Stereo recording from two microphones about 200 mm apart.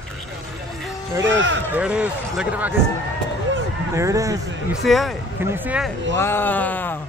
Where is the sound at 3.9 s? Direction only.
15° right (ahead or behind).